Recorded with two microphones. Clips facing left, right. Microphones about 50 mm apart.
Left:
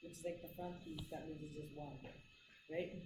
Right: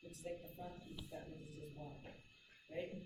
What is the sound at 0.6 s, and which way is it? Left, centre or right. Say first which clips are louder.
Speech: left 3 dB; left.